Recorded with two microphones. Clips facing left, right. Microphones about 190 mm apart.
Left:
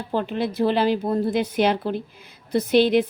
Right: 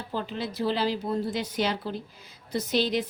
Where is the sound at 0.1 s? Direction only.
60° left (ahead or behind).